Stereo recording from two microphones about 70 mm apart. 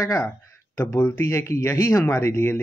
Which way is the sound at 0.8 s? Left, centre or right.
Left.